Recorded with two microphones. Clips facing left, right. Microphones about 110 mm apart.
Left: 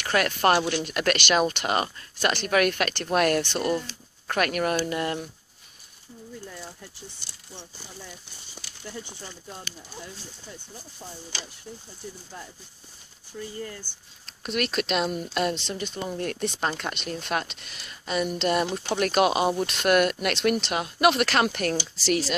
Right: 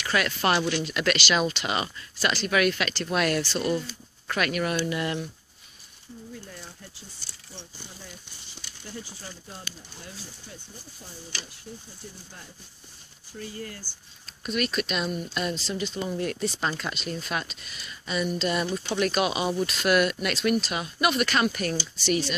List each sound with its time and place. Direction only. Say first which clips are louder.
0.0 s speech: left 3 dB; 50° left (ahead or behind)
13.9 s speech: even; 55° left (ahead or behind)
14.2 s speech: even; 75° left (ahead or behind)
15.3 s speech: left 4 dB; 70° left (ahead or behind)
15.7 s speech: right 1 dB; 45° left (ahead or behind); by 22.2 s 90° left